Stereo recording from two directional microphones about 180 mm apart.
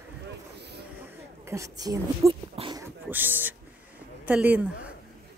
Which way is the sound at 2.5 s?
25° right (ahead or behind).